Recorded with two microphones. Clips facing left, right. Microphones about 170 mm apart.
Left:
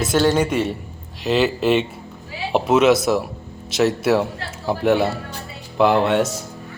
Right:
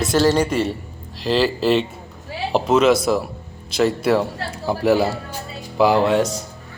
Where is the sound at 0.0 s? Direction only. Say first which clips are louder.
Right 1 dB; centre (ahead or behind).